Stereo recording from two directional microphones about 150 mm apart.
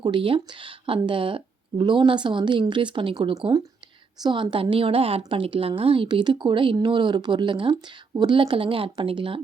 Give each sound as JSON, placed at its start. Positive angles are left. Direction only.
{"t": 0.0, "sound": "a woman's voice", "side_deg": -35}